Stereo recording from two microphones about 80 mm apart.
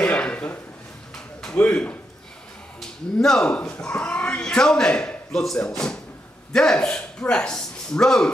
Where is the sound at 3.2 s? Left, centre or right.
Centre.